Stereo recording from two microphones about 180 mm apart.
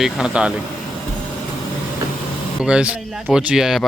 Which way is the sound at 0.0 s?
5° right (ahead or behind).